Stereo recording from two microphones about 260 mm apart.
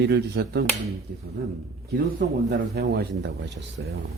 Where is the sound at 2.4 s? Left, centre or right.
Right.